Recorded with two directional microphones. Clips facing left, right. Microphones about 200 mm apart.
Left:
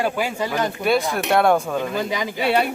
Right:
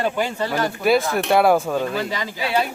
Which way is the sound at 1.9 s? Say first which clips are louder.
Left 1 dB; 15° left (ahead or behind).